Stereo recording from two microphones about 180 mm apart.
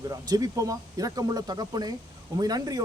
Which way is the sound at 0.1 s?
20° right (ahead or behind).